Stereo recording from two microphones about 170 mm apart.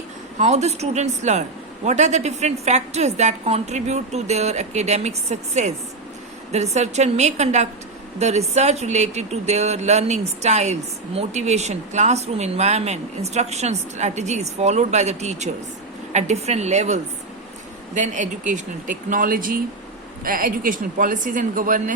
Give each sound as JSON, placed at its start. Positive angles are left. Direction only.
{"t": 0.3, "sound": "speech", "side_deg": -45}